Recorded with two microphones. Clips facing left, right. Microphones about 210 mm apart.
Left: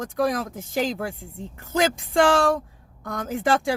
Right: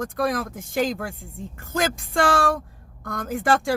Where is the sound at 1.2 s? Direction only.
50° right (ahead or behind).